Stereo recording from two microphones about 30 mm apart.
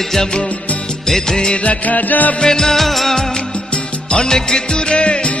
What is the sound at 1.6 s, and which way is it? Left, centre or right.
Music, left.